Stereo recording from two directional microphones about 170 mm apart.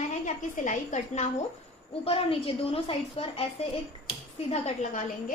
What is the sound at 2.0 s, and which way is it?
A woman's voice, 35° left (ahead or behind).